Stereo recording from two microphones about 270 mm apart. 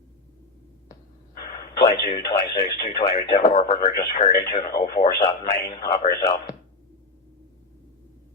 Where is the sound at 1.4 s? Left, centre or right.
Left.